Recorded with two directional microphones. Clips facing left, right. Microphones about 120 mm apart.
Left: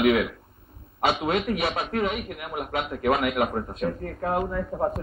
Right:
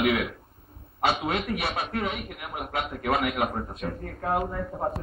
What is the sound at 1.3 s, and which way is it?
Speech, centre (ahead or behind).